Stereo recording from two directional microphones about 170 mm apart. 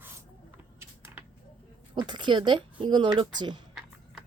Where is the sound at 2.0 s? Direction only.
25° right (ahead or behind).